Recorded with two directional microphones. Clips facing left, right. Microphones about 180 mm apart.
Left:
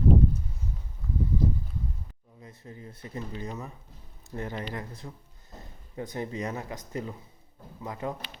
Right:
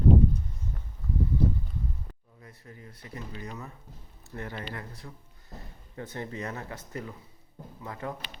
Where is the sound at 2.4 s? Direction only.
25° left (ahead or behind).